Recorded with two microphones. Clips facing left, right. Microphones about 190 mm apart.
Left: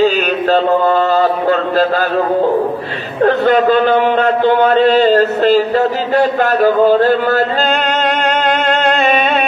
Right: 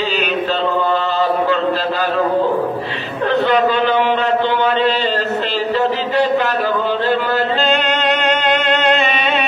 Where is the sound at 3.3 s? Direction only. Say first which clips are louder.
Left 3 dB; 50° left (ahead or behind).